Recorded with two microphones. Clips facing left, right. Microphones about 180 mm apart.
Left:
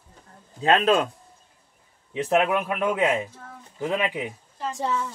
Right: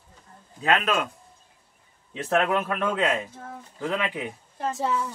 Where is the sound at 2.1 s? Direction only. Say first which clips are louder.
Left 2 dB; 15° left (ahead or behind).